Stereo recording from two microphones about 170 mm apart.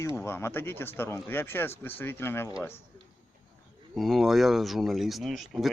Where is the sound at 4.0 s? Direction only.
Centre (ahead or behind).